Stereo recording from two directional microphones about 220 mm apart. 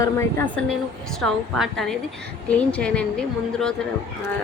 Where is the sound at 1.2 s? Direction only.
Centre (ahead or behind).